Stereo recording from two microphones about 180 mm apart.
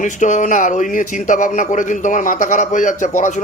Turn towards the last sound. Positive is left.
turn(degrees=40)  # may be behind; listen again after turning